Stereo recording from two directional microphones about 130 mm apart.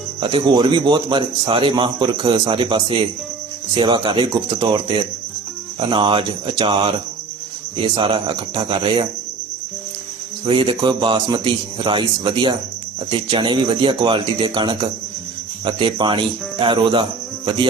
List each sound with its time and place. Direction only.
0.2 s a man's voice: 40° right (ahead or behind)
10.4 s a man's voice: 40° right (ahead or behind)